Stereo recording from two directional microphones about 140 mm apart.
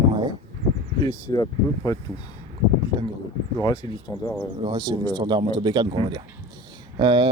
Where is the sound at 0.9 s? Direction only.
30° left (ahead or behind).